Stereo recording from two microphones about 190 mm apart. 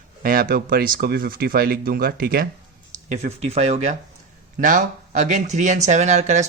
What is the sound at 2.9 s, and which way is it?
Speech, 40° right (ahead or behind).